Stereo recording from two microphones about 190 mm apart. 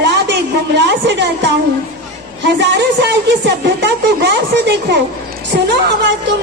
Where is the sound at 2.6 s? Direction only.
65° right (ahead or behind).